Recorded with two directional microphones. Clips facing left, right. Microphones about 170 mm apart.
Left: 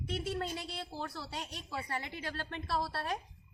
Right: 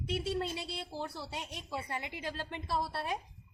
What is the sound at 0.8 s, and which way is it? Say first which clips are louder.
A woman's voice: right 1 dB; 25° right (ahead or behind).